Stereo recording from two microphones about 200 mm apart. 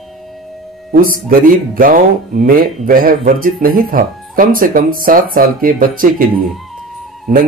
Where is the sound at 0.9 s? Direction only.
45° right (ahead or behind).